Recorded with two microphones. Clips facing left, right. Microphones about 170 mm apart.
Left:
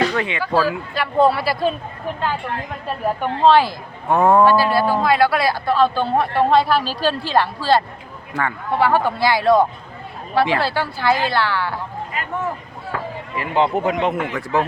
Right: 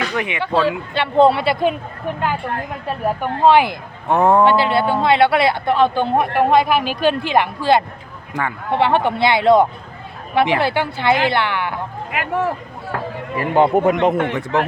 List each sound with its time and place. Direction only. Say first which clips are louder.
0.2 s speech: right 1 dB; 20° right (ahead or behind)
3.2 s speech: right 1 dB; 15° right (ahead or behind)
12.1 s speech: right 6 dB; 85° right
13.3 s speech: right 4 dB; 45° right (ahead or behind)
14.3 s speech: right 1 dB; 20° right (ahead or behind)